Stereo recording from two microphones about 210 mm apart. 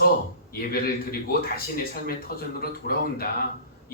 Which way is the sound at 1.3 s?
45° left (ahead or behind).